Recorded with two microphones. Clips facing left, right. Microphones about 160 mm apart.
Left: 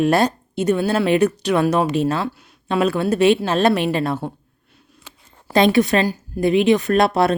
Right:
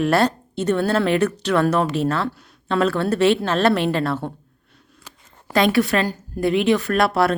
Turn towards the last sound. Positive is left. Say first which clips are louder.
# left 2 dB
turn(degrees=20)  # may be behind; listen again after turning